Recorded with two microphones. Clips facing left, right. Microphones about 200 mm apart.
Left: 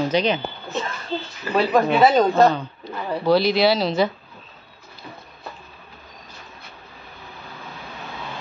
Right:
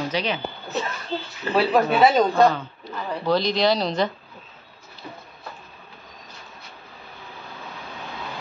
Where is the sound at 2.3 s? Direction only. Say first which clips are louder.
Left 2 dB; 15° left (ahead or behind).